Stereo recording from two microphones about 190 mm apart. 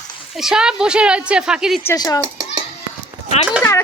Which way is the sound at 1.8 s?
20° left (ahead or behind).